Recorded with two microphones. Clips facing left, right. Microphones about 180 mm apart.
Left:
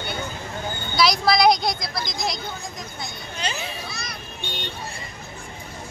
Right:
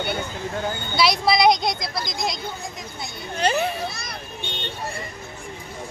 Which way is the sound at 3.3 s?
55° right (ahead or behind).